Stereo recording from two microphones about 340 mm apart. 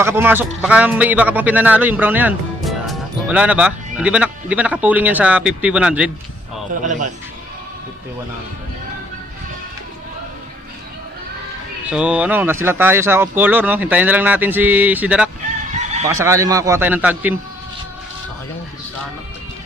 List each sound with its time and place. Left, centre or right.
0.0 s a man's voice: centre
11.8 s a man's voice: centre
15.7 s fowl: centre
16.2 s a man's voice: centre